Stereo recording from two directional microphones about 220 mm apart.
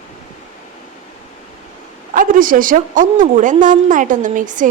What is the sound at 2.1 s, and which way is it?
A woman's voice, 40° right (ahead or behind).